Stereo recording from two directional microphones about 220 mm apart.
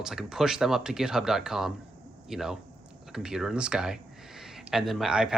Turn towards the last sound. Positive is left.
turn(degrees=0)  # may be behind; listen again after turning